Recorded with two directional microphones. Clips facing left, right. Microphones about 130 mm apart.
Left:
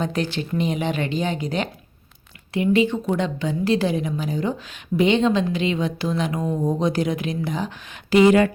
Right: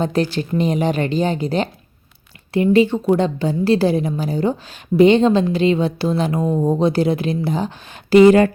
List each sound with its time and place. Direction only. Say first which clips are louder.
0.0 s a woman's voice: right 5 dB; 35° right (ahead or behind)